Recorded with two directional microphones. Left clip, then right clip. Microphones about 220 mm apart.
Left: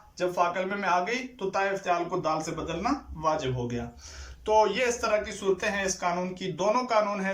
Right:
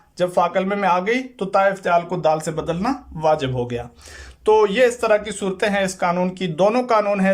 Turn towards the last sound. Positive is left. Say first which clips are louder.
# right 8 dB
turn(degrees=-50)  # may be behind; listen again after turning